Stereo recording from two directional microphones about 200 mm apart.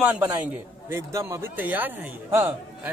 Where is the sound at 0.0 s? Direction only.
10° right (ahead or behind).